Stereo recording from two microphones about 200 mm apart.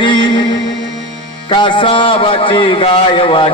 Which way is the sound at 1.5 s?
25° left (ahead or behind).